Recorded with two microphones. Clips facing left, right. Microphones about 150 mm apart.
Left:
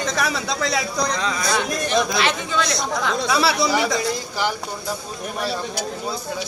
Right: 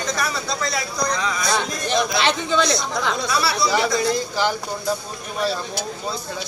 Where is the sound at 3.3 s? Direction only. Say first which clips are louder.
Left 3 dB; 90° left.